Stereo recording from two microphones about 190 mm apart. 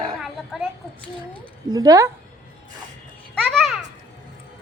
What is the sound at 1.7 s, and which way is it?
Speech, 20° right (ahead or behind).